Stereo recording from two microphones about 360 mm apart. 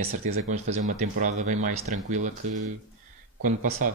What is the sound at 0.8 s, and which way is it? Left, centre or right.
Speech, right.